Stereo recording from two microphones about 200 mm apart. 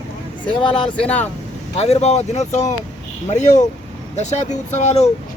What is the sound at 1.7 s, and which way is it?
Speech, 30° left (ahead or behind).